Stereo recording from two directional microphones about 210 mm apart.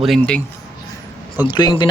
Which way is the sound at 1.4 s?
20° left (ahead or behind).